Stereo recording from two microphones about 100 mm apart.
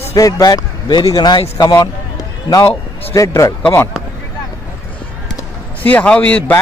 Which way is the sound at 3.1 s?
30° left (ahead or behind).